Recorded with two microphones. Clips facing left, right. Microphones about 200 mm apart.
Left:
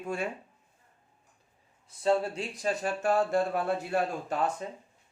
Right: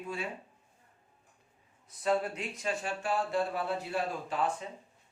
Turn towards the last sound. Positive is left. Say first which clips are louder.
# left 2 dB
turn(degrees=45)  # may be behind; listen again after turning